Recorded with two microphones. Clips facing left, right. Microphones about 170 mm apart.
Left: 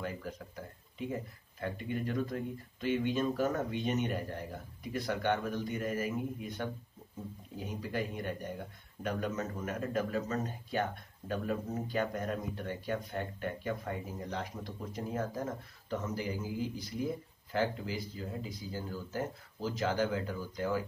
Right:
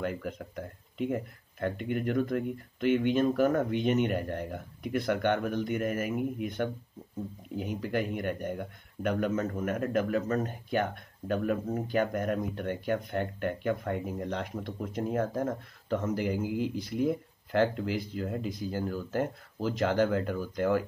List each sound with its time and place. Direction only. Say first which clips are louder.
0.0 s speech: right 6 dB; 65° right (ahead or behind)